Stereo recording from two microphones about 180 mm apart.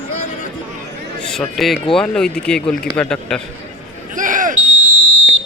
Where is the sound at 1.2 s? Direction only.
Centre (ahead or behind).